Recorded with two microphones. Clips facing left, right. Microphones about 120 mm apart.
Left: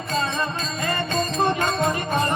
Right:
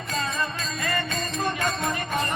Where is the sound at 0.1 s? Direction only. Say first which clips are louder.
Left 4 dB; 30° left (ahead or behind).